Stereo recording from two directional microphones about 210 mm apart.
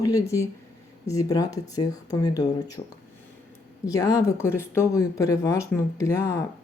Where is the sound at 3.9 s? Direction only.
15° left (ahead or behind).